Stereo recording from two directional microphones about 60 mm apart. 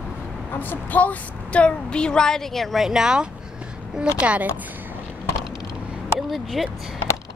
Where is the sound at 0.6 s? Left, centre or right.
Left; by 3.2 s centre.